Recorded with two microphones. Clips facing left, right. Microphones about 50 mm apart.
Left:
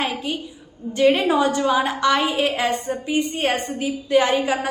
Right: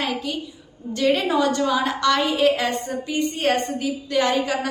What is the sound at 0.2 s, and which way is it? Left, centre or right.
A woman's voice, left.